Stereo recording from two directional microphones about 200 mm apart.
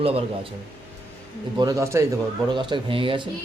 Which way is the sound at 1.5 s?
15° right (ahead or behind).